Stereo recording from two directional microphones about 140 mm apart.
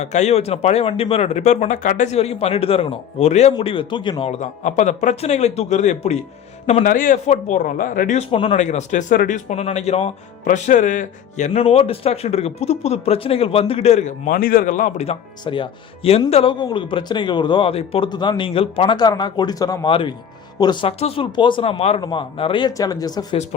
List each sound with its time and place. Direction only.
0.0 s speech: 55° left (ahead or behind)
3.6 s a man's voice: 40° left (ahead or behind)
4.3 s speech: 60° left (ahead or behind)
6.8 s speech: 75° left (ahead or behind); by 7.6 s 60° left (ahead or behind)
7.6 s speech: 75° left (ahead or behind)
8.3 s a man's voice: 40° left (ahead or behind)
8.5 s speech: 55° left (ahead or behind)
14.3 s speech: 90° left; by 15.0 s 75° left (ahead or behind)
15.0 s a man's voice: 40° left (ahead or behind)
18.9 s speech: 30° left (ahead or behind)
19.9 s a man's voice: 40° left (ahead or behind)
20.8 s a man's voice: 45° left (ahead or behind); by 23.4 s 30° left (ahead or behind)